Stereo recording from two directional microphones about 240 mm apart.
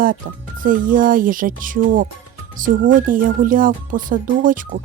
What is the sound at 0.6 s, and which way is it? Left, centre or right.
Speech, right.